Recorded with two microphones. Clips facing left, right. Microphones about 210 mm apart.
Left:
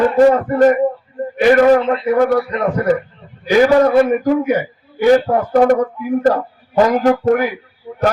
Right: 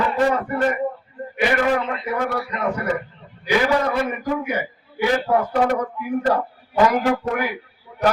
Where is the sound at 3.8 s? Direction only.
40° left (ahead or behind).